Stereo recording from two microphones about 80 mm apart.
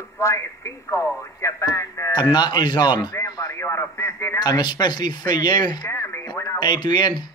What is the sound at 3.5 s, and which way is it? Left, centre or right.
Speech, left.